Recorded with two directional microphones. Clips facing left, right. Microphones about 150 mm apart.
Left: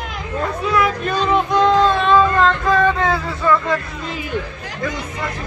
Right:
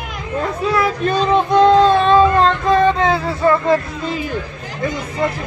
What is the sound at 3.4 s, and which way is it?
Speech, 35° right (ahead or behind).